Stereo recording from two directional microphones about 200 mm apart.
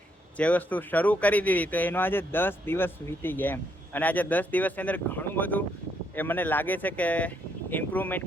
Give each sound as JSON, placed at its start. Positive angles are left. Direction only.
{"t": 0.3, "sound": "speech", "side_deg": 5}